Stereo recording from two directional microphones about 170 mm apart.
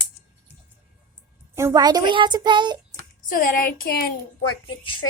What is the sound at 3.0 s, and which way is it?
Speech, 55° left (ahead or behind).